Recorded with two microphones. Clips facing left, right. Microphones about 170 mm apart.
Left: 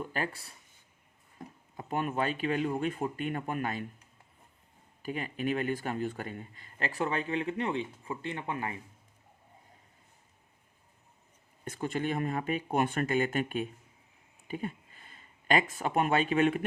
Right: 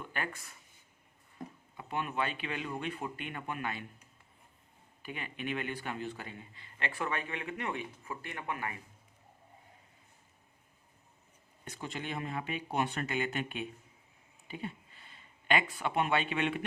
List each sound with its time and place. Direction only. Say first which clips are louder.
0.0 s speech: left 5 dB; 35° left (ahead or behind)
1.7 s speech: left 4 dB; 40° left (ahead or behind)
5.0 s speech: left 6 dB; 40° left (ahead or behind)
11.6 s speech: left 8 dB; 50° left (ahead or behind)